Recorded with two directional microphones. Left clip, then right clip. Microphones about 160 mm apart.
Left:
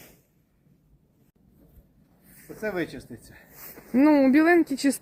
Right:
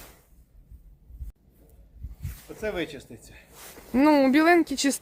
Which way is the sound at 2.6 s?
15° right (ahead or behind).